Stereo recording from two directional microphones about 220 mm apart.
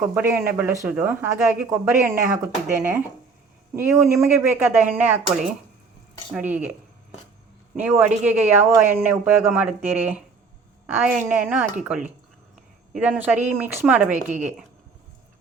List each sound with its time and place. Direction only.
0.1 s speech: 10° right (ahead or behind)
7.8 s speech: 10° right (ahead or behind)
13.0 s speech: 5° right (ahead or behind)
14.1 s a woman's voice: 35° right (ahead or behind)